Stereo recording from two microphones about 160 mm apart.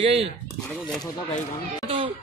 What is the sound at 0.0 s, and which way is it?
Speech, 40° right (ahead or behind).